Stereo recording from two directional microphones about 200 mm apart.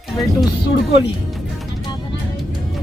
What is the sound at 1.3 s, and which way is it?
Music, centre (ahead or behind).